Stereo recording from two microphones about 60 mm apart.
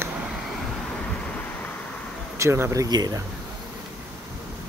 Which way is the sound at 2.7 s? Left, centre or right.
Right.